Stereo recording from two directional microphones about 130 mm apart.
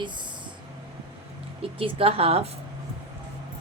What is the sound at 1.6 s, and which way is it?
Speech, 45° right (ahead or behind).